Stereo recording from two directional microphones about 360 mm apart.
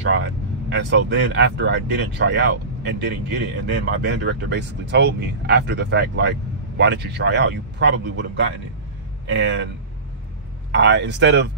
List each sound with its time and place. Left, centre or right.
0.0 s a man's voice: right
10.7 s speech: right